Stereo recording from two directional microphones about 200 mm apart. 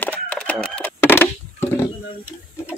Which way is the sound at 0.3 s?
5° left (ahead or behind).